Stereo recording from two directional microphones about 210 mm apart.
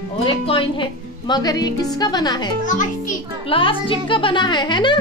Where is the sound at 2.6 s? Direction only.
35° left (ahead or behind).